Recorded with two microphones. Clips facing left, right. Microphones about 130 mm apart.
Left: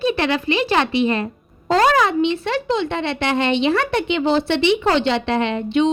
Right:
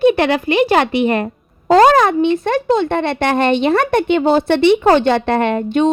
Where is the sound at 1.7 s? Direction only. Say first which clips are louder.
Right 6 dB; 45° right (ahead or behind).